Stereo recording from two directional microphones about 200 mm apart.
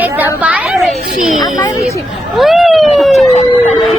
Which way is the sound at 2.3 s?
Centre (ahead or behind).